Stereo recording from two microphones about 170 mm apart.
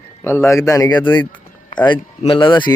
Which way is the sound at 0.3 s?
15° left (ahead or behind).